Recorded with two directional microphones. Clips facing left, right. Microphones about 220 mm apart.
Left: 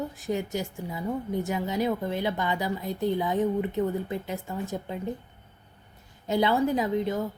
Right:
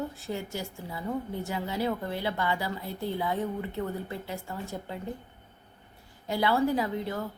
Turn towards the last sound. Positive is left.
turn(degrees=20)  # may be behind; listen again after turning